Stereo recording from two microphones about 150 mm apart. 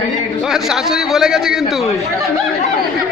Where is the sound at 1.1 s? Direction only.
5° right (ahead or behind).